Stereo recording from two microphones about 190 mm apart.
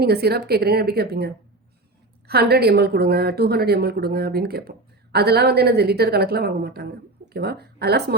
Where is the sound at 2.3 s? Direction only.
55° right (ahead or behind).